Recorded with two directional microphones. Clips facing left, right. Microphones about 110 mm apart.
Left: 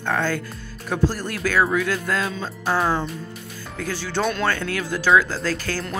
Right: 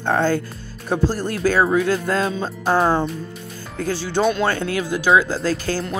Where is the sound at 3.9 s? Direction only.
20° right (ahead or behind).